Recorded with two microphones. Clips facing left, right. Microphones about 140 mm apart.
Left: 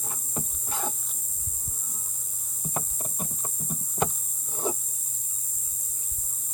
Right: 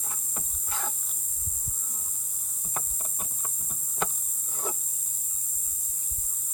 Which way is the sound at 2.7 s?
25° left (ahead or behind).